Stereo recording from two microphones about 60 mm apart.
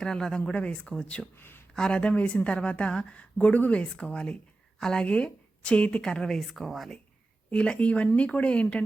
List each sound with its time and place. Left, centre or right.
0.0 s speech: centre
1.4 s speech: left
1.7 s a woman's voice: centre
7.5 s a woman's voice: centre